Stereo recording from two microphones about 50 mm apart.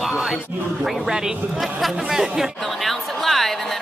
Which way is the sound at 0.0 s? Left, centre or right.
Centre.